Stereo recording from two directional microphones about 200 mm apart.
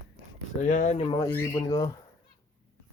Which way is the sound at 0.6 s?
35° left (ahead or behind).